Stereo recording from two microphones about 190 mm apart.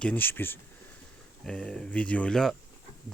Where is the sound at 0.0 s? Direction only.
10° left (ahead or behind).